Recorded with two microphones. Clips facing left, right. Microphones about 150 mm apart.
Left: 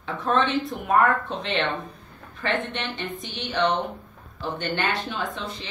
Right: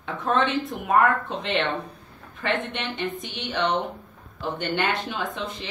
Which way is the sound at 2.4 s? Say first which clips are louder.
Even; 20° right (ahead or behind).